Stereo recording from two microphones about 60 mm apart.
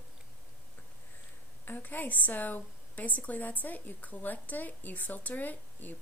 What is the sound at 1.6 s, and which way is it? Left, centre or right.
A woman's voice, left.